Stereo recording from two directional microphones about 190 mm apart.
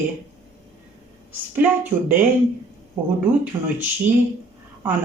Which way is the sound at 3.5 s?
20° right (ahead or behind).